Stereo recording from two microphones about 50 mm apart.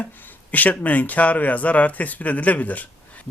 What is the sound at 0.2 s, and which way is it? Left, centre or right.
Speech, left.